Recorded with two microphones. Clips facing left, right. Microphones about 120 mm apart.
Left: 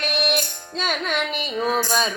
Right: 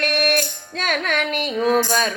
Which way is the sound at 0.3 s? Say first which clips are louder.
Right 3 dB; 55° right (ahead or behind).